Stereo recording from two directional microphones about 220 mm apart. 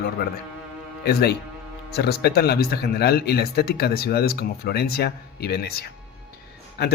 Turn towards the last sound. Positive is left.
turn(degrees=50)  # may be behind; listen again after turning